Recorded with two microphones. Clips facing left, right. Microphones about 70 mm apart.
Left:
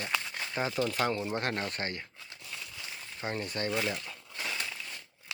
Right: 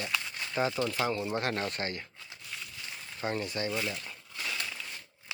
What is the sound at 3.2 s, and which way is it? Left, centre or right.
Speech, left.